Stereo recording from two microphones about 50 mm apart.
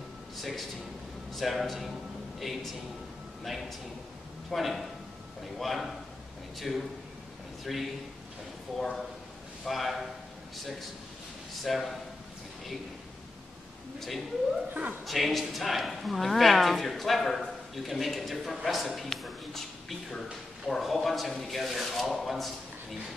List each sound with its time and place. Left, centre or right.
0.4 s speech: centre
3.4 s speech: centre
9.7 s speech: centre
11.6 s speech: centre
13.9 s a woman's voice: centre
14.7 s a woman's voice: right
15.0 s speech: centre